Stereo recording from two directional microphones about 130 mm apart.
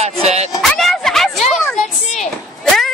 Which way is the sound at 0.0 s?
55° right (ahead or behind).